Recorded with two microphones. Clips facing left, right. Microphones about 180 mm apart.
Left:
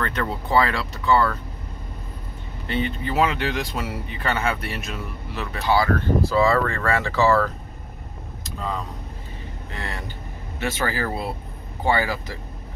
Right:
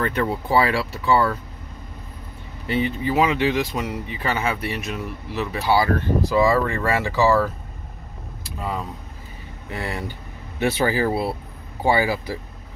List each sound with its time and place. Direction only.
0.0 s speech: 10° right (ahead or behind)
2.6 s speech: 10° right (ahead or behind)
5.8 s speech: 15° right (ahead or behind)
8.5 s speech: 10° right (ahead or behind)